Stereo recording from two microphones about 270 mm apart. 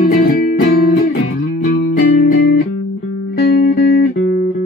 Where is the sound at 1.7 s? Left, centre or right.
Left.